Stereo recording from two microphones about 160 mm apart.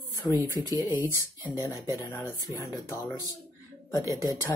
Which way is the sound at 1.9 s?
15° left (ahead or behind).